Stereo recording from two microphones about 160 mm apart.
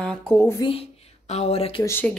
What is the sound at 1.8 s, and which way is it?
Speech, 15° left (ahead or behind).